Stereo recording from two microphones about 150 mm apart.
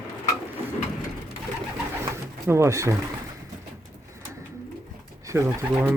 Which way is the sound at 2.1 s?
20° right (ahead or behind).